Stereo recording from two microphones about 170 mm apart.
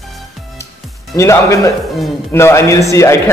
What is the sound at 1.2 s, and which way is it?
Speech, 15° left (ahead or behind).